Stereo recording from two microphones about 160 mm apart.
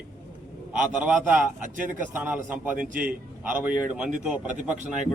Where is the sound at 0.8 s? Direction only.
10° right (ahead or behind).